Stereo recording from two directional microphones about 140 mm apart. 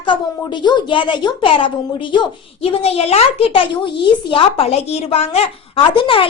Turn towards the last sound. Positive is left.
turn(degrees=40)  # may be behind; listen again after turning